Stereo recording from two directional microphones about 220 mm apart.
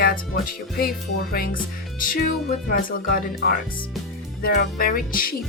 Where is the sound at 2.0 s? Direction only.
40° left (ahead or behind).